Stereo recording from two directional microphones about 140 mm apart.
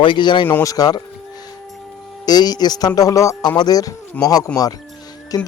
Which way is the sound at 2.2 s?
30° left (ahead or behind).